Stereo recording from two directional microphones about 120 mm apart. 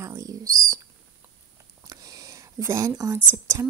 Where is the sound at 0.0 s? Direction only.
25° right (ahead or behind).